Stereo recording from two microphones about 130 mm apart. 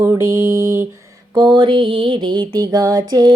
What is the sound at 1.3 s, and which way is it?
Mantra, 35° right (ahead or behind).